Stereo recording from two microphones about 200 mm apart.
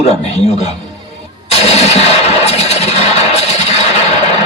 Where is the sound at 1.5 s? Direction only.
30° left (ahead or behind).